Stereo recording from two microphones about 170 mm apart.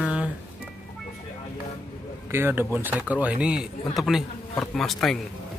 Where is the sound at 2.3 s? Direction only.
15° right (ahead or behind); by 5.1 s centre (ahead or behind).